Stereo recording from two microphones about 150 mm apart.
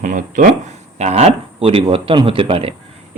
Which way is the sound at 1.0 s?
45° right (ahead or behind).